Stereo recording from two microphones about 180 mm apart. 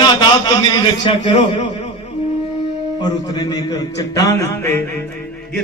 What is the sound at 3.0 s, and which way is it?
A man's voice, 20° left (ahead or behind).